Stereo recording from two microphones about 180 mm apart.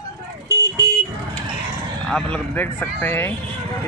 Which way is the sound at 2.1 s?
5° left (ahead or behind).